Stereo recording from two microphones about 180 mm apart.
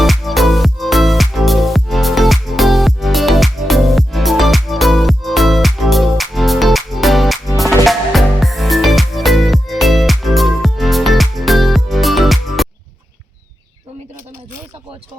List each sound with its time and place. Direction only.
0.0 s music: centre (ahead or behind)